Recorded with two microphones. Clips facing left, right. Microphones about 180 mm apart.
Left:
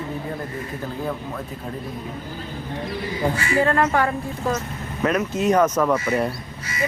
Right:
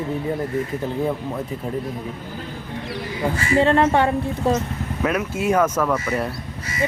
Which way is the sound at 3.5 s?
25° right (ahead or behind).